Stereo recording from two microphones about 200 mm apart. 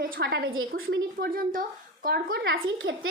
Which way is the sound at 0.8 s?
90° right.